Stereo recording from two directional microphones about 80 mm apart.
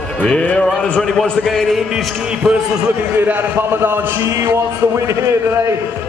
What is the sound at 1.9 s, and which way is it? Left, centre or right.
Speech, centre.